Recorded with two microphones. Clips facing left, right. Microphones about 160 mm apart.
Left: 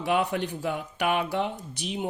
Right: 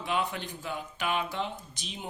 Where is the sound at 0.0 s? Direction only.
65° left (ahead or behind).